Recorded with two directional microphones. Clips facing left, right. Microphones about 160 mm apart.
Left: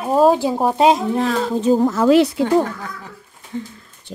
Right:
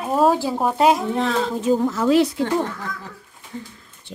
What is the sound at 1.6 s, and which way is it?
Speech, 30° left (ahead or behind).